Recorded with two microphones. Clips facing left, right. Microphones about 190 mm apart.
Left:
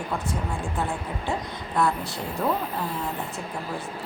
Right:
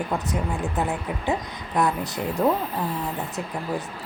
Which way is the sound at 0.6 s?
20° right (ahead or behind).